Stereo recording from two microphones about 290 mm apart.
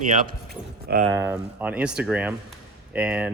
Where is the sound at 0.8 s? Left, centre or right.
Right.